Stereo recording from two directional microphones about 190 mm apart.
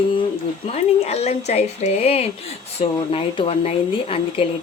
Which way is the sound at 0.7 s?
35° left (ahead or behind).